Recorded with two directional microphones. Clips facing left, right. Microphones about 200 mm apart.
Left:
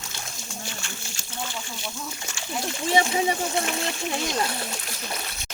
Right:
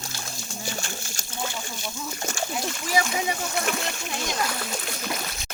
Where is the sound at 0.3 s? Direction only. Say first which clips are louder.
Right 7 dB; 40° right (ahead or behind).